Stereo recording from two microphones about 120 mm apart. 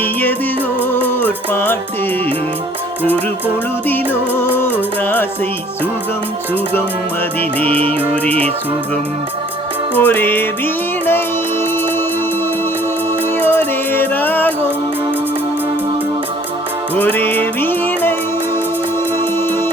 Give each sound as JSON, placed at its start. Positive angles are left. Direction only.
{"t": 0.0, "sound": "music", "side_deg": 15}
{"t": 3.8, "sound": "music", "side_deg": 15}
{"t": 7.9, "sound": "music", "side_deg": 15}
{"t": 9.9, "sound": "music", "side_deg": 15}
{"t": 13.4, "sound": "music", "side_deg": 15}
{"t": 16.9, "sound": "music", "side_deg": 15}
{"t": 19.4, "sound": "music", "side_deg": 20}